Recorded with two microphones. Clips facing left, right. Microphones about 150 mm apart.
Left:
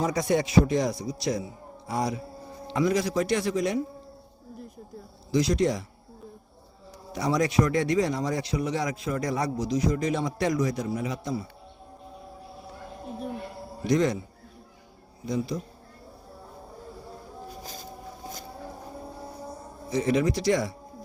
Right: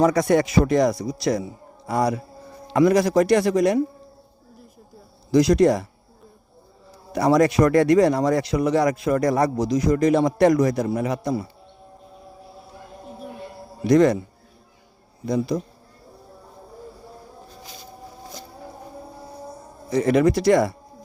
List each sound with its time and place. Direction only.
0.0 s speech: 70° right (ahead or behind)
1.9 s speech: 60° right (ahead or behind)
2.7 s speech: 70° right (ahead or behind)
5.3 s speech: 75° right (ahead or behind)
7.1 s speech: 65° right (ahead or behind)
13.8 s speech: 65° right (ahead or behind)
15.3 s speech: 70° right (ahead or behind)
17.6 s a sound: 40° left (ahead or behind)
19.9 s speech: 55° right (ahead or behind)